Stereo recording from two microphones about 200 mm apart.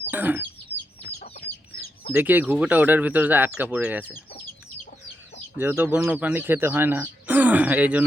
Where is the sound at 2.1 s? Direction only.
10° right (ahead or behind).